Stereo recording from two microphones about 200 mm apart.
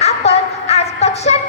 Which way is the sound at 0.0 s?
35° left (ahead or behind).